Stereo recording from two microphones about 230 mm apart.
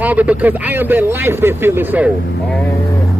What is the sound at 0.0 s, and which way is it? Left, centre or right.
A man's voice, centre.